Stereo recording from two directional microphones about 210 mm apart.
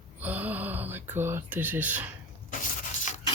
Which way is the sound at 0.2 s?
10° right (ahead or behind).